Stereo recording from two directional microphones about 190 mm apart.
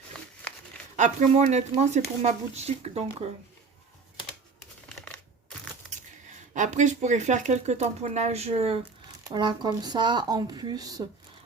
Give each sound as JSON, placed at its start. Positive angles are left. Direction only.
{"t": 0.1, "sound": "a sound", "side_deg": 5}
{"t": 0.9, "sound": "speech", "side_deg": -40}
{"t": 6.5, "sound": "speech", "side_deg": -40}
{"t": 9.3, "sound": "speech", "side_deg": -25}